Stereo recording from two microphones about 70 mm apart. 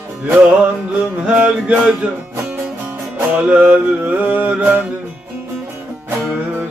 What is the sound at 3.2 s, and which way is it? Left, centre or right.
Music, right.